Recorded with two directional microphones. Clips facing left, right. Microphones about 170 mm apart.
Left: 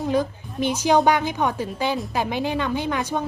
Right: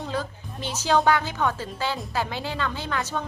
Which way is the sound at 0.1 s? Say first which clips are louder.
Left 8 dB; 15° left (ahead or behind).